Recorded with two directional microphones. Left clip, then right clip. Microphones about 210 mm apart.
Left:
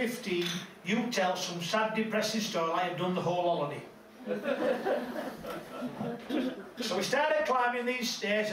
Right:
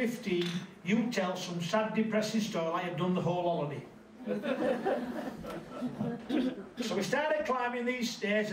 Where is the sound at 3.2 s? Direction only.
30° left (ahead or behind).